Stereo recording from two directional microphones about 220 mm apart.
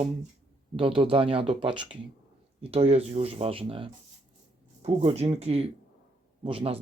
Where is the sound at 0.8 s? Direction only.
25° right (ahead or behind).